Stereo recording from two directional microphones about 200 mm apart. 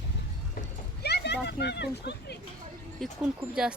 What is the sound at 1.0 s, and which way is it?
Speech, 55° left (ahead or behind).